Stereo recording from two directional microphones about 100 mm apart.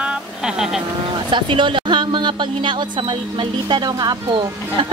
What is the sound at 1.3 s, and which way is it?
Speech, 55° right (ahead or behind).